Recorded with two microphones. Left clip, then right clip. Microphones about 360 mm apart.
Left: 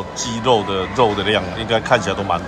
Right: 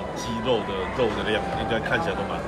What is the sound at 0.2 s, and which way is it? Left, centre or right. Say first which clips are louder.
Speech: left 9 dB; centre.